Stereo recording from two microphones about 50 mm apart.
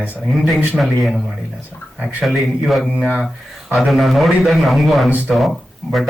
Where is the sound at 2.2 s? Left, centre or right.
Centre.